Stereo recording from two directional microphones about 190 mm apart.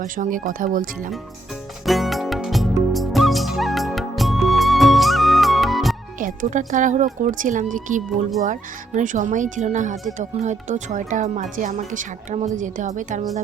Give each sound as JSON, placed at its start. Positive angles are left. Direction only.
{"t": 0.0, "sound": "speech", "side_deg": -45}
{"t": 1.8, "sound": "music", "side_deg": 0}
{"t": 6.1, "sound": "speech", "side_deg": -45}